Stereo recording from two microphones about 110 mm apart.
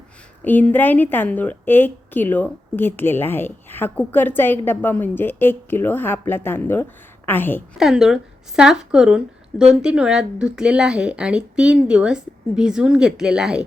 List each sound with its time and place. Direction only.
0.4 s a woman's voice: 15° left (ahead or behind)
7.8 s speech: 5° right (ahead or behind)